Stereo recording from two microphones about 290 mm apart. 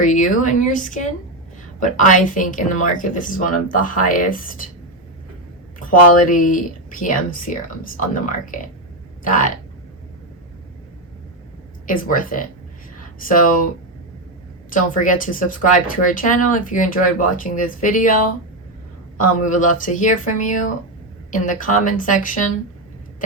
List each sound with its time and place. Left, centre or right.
0.0 s speech: left
5.9 s speech: left
11.9 s speech: left
14.7 s speech: left
19.5 s speech: left